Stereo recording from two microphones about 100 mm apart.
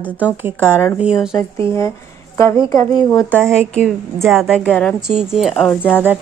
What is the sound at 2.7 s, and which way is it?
Speech, 35° left (ahead or behind).